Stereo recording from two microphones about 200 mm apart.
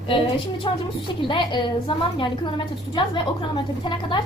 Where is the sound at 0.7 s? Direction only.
20° left (ahead or behind).